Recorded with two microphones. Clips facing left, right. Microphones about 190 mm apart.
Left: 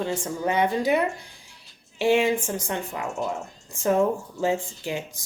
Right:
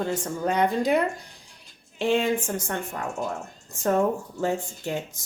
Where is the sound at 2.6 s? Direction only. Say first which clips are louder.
Left 1 dB; 10° left (ahead or behind).